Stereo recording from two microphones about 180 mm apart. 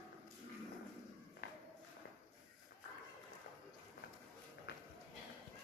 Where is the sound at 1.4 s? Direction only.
60° left (ahead or behind).